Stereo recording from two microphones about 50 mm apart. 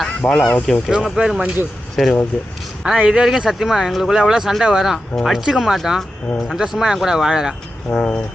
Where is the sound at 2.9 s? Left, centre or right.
Right.